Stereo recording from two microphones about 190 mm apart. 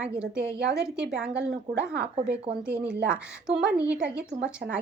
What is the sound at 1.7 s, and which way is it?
Speech, 60° right (ahead or behind).